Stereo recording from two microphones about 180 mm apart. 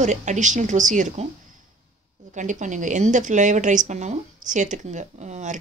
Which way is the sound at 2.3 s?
45° right (ahead or behind).